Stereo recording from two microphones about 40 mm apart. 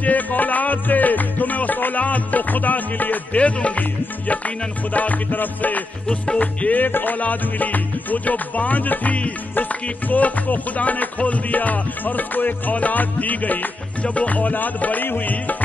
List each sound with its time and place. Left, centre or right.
0.0 s music: left
3.3 s music: left
4.9 s music: left
6.0 s music: left
6.7 s music: left
7.2 s music: left